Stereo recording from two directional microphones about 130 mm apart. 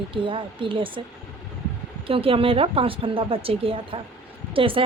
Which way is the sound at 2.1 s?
45° right (ahead or behind).